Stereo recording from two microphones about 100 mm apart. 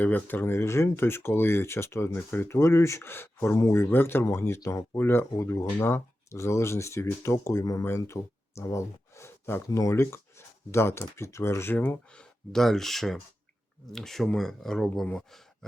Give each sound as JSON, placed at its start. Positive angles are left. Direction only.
{"t": 0.0, "sound": "speech", "side_deg": 20}